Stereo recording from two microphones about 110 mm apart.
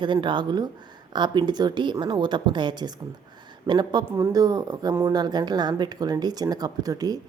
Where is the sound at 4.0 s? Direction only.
20° right (ahead or behind).